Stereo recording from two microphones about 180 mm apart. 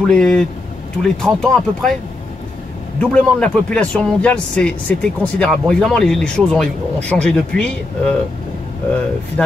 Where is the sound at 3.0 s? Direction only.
5° left (ahead or behind).